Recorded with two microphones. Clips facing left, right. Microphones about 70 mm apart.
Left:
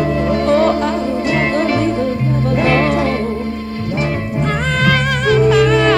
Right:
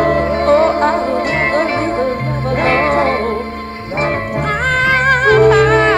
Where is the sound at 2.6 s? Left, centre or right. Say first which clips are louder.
Right 3 dB; right.